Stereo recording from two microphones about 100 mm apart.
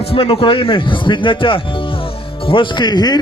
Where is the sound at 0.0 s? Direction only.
70° left (ahead or behind).